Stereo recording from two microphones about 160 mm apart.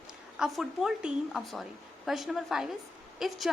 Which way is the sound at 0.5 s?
5° right (ahead or behind).